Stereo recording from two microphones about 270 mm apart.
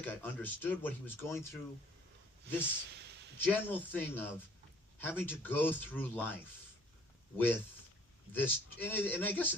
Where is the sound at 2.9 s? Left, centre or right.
Right.